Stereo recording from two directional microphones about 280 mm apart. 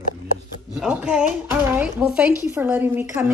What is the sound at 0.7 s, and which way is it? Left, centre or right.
A woman's voice, centre.